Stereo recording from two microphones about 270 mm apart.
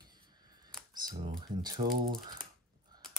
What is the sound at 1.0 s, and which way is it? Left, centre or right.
Speech, centre.